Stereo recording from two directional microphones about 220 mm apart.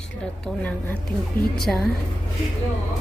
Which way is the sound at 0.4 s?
5° left (ahead or behind).